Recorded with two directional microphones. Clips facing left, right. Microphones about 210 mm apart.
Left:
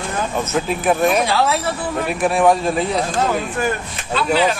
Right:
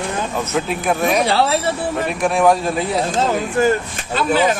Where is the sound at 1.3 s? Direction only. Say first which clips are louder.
Right 1 dB; 35° right (ahead or behind).